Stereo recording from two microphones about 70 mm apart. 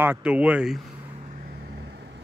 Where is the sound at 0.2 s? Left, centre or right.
Centre.